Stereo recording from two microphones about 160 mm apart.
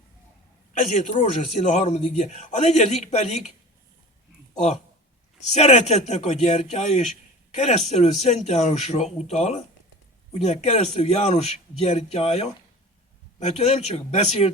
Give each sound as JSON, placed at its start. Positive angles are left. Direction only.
{"t": 0.7, "sound": "a man's voice", "side_deg": 50}
{"t": 5.5, "sound": "a man's voice", "side_deg": 45}